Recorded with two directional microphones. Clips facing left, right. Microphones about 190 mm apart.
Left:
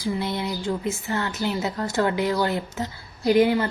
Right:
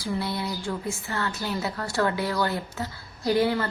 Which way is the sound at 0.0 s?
20° left (ahead or behind).